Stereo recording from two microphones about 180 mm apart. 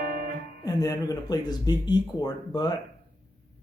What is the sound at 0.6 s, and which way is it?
Speech, 20° left (ahead or behind).